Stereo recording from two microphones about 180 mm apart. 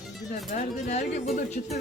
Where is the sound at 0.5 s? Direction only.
40° left (ahead or behind).